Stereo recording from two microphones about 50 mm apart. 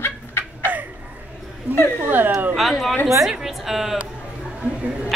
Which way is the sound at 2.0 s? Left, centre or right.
Right.